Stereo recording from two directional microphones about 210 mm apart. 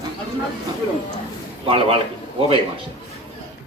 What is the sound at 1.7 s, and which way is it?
Speech, 25° right (ahead or behind).